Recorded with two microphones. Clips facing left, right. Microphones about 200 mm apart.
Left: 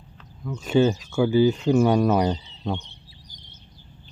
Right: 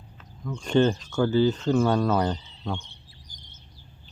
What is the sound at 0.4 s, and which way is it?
Speech, 5° left (ahead or behind).